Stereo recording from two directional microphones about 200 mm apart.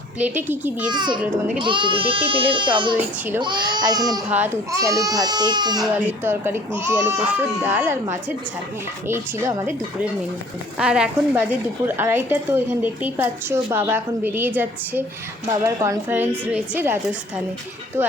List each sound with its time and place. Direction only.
0.2 s a woman's voice: 10° right (ahead or behind)
0.9 s a child's voice: 20° right (ahead or behind)
4.3 s a woman's voice: 10° right (ahead or behind)
5.8 s a woman's voice: 10° right (ahead or behind)
10.8 s a woman's voice: 5° right (ahead or behind)